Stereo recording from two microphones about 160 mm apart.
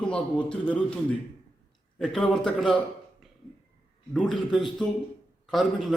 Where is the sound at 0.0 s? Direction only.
5° left (ahead or behind).